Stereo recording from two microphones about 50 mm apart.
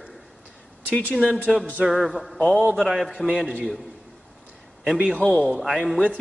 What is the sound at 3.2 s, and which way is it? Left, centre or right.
Speech, centre.